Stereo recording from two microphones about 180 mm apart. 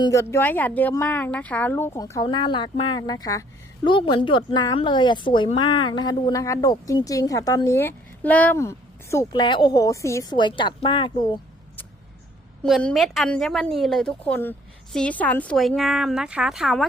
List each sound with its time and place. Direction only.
0.0 s a woman's voice: 15° left (ahead or behind)
12.6 s a woman's voice: centre (ahead or behind)